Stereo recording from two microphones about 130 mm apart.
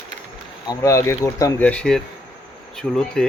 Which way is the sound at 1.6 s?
10° left (ahead or behind).